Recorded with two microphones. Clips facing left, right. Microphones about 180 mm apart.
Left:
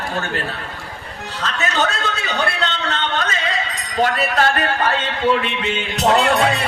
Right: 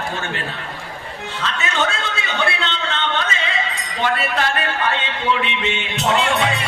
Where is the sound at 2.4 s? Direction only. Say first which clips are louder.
Even; 40° left (ahead or behind).